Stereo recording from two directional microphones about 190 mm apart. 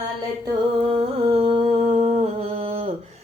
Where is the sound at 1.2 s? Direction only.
30° right (ahead or behind).